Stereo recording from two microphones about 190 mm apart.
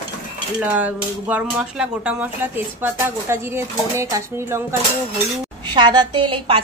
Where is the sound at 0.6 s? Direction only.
5° right (ahead or behind); by 6.6 s 30° right (ahead or behind).